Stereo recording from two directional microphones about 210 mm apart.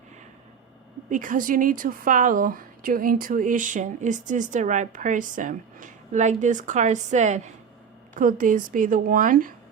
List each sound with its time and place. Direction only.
1.1 s a woman's voice: 40° right (ahead or behind)